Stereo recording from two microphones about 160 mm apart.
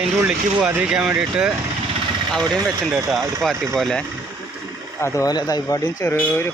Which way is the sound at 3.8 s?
5° left (ahead or behind).